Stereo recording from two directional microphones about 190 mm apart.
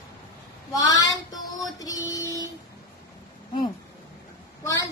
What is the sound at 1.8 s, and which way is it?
Music, 20° left (ahead or behind).